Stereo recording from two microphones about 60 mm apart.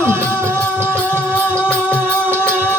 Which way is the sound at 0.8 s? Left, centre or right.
Left.